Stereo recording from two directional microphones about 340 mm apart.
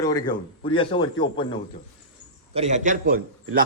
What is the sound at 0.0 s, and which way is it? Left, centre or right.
Speech, centre.